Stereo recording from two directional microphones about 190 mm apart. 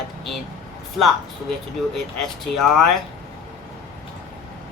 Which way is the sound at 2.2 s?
Centre (ahead or behind).